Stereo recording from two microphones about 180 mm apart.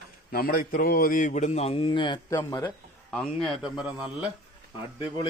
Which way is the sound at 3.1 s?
Centre (ahead or behind).